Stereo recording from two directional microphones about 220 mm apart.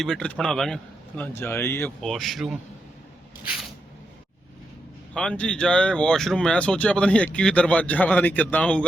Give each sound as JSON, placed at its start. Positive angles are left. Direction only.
{"t": 0.0, "sound": "speech", "side_deg": 5}
{"t": 5.1, "sound": "speech", "side_deg": 5}